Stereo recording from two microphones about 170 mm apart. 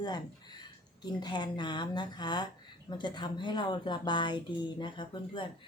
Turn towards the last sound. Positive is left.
turn(degrees=30)  # may be behind; listen again after turning